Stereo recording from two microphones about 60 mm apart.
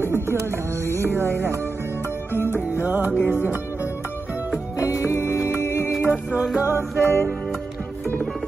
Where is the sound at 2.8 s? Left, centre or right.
Right.